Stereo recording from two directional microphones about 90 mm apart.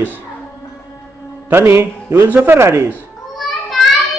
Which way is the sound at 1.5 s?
25° right (ahead or behind).